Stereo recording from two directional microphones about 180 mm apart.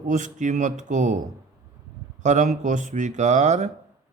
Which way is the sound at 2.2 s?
40° right (ahead or behind).